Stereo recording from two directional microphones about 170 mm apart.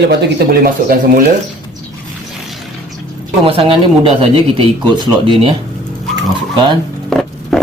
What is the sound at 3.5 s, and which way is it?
Speech, 35° right (ahead or behind).